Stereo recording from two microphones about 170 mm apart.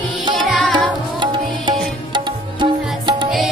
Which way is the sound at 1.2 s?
25° right (ahead or behind).